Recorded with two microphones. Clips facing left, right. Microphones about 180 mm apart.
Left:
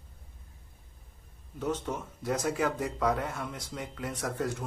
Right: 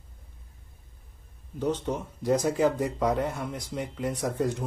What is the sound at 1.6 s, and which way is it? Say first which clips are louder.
Speech: right 4 dB; 15° right (ahead or behind).